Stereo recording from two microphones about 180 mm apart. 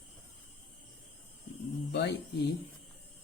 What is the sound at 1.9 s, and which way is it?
Speech, 65° left (ahead or behind).